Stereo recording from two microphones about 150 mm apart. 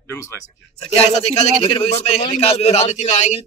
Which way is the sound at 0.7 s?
45° left (ahead or behind).